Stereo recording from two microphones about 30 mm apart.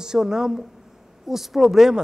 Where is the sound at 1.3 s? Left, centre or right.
Centre.